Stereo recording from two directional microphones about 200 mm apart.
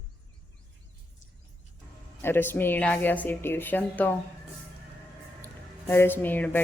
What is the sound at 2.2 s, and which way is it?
A woman's voice, 10° left (ahead or behind).